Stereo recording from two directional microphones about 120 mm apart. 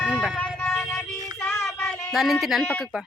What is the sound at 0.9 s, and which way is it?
Child singing, 10° left (ahead or behind).